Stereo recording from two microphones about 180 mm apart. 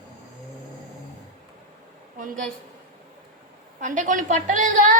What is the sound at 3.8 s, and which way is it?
A woman's voice, 45° right (ahead or behind).